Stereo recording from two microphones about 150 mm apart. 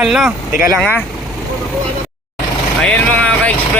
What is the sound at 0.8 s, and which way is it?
Speech, 10° left (ahead or behind).